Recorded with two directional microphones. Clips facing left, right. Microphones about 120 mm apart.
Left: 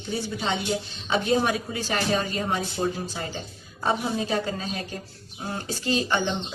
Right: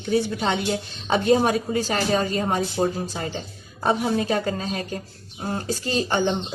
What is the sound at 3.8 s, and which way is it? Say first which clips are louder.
A woman's voice: right 4 dB; 50° right (ahead or behind).